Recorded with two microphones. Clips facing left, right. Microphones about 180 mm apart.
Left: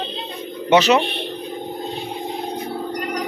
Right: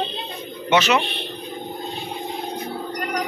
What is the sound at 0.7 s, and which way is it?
Speech, 35° left (ahead or behind).